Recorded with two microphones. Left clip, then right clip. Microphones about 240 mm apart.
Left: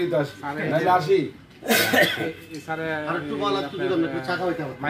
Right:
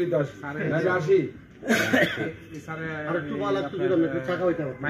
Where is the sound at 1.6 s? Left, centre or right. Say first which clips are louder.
Left 3 dB; left.